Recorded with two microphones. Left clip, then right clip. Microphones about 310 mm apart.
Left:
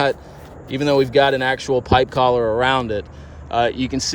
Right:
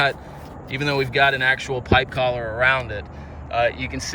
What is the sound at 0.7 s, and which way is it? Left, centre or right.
Speech, centre.